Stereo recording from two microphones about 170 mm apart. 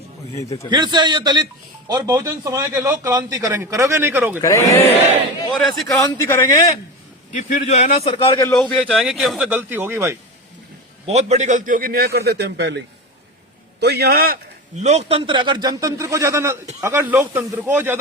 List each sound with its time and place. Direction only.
0.3 s speech: 15° left (ahead or behind)
0.7 s a man's voice: 25° right (ahead or behind); by 4.4 s 10° right (ahead or behind)
4.4 s speech: 20° left (ahead or behind)
5.5 s speech: centre (ahead or behind)
6.0 s speech: 20° left (ahead or behind)
7.3 s a man's voice: 45° left (ahead or behind); by 8.4 s 30° left (ahead or behind)
8.7 s speech: centre (ahead or behind)
11.0 s a man's voice: 40° right (ahead or behind); by 12.8 s 85° right
13.7 s a man's voice: 75° right (ahead or behind)
14.8 s a man's voice: 40° right (ahead or behind); by 18.0 s 10° right (ahead or behind)